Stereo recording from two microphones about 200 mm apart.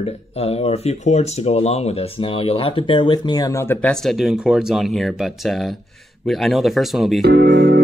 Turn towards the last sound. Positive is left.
turn(degrees=-55)  # may be behind; listen again after turning